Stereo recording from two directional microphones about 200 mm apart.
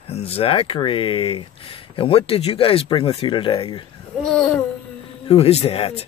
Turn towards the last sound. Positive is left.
turn(degrees=30)  # may be behind; listen again after turning